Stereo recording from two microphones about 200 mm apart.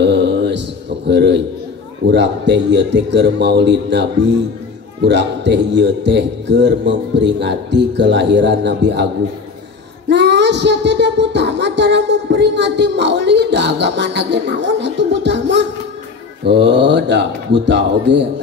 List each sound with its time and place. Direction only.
0.0 s mantra: 60° right (ahead or behind)
2.0 s a man's voice: 60° right (ahead or behind)
10.0 s music: 60° right (ahead or behind)
16.4 s a man's voice: 60° right (ahead or behind)